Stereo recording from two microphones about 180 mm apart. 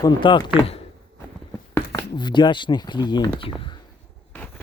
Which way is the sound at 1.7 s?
15° left (ahead or behind).